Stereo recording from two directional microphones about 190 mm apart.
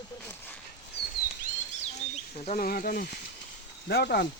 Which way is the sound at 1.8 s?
35° left (ahead or behind).